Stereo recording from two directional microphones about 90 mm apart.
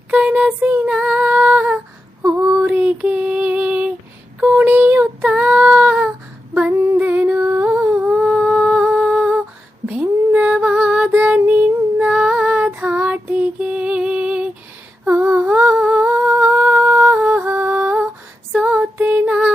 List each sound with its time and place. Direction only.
0.1 s female singing: 15° right (ahead or behind)
2.2 s female singing: 30° right (ahead or behind)
2.6 s female singing: 15° right (ahead or behind)
4.4 s a sound: 20° right (ahead or behind)
5.2 s child singing: 15° right (ahead or behind)
6.7 s humming: 25° right (ahead or behind)
9.8 s a sound: 15° right (ahead or behind)
11.2 s child singing: 20° right (ahead or behind)
11.9 s female singing: 15° right (ahead or behind)
13.3 s lullaby: 15° right (ahead or behind)
15.2 s humming: 20° right (ahead or behind)
17.4 s music: 20° right (ahead or behind)
18.9 s female singing: 20° right (ahead or behind)